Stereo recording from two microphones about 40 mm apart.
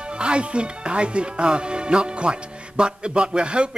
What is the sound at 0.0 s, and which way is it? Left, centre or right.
Speech, right.